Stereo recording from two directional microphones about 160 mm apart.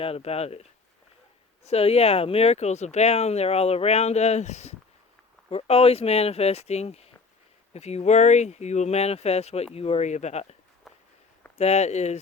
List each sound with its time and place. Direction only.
0.0 s speech: 40° left (ahead or behind)
10.9 s walk: centre (ahead or behind)
11.5 s speech: 40° left (ahead or behind)